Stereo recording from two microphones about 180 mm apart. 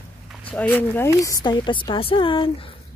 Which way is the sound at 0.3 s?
5° left (ahead or behind).